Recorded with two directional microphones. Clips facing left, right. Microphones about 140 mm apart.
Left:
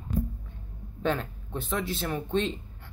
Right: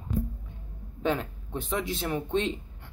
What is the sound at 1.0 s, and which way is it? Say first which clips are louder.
Speech: even; 15° right (ahead or behind).